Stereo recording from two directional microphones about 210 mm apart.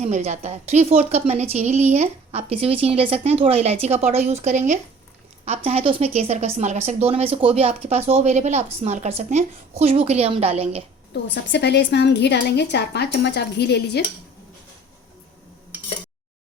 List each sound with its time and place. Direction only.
0.0 s a woman's voice: 30° right (ahead or behind)
11.1 s a woman's voice: 55° left (ahead or behind)